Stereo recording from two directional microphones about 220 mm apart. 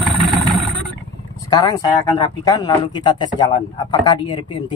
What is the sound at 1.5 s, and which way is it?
A man's voice, 20° left (ahead or behind).